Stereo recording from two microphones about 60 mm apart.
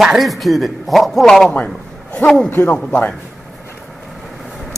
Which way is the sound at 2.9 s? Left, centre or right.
Centre.